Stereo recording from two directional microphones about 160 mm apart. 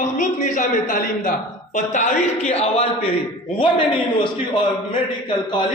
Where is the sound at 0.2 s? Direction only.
50° left (ahead or behind); by 4.3 s 30° left (ahead or behind).